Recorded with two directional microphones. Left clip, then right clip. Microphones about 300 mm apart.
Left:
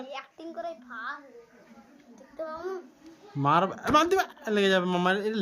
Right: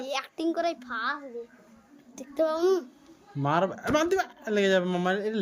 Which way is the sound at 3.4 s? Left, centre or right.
Centre.